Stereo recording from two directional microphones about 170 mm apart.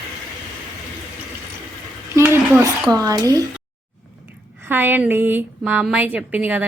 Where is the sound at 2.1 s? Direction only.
15° right (ahead or behind).